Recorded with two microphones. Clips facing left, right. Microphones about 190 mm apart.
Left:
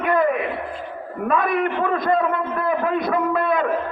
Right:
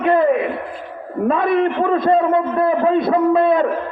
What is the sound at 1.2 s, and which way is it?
A man's voice, 30° right (ahead or behind).